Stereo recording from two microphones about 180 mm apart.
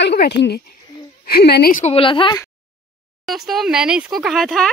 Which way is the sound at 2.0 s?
30° left (ahead or behind).